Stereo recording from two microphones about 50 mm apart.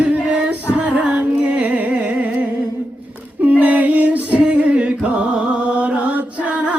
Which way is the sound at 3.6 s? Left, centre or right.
Right.